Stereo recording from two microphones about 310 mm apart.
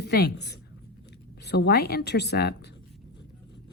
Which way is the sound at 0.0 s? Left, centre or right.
Left.